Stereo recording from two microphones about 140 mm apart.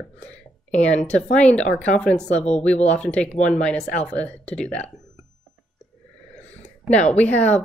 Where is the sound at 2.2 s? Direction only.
50° left (ahead or behind).